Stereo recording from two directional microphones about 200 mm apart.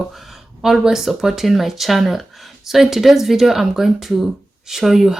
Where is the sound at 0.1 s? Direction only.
Centre (ahead or behind).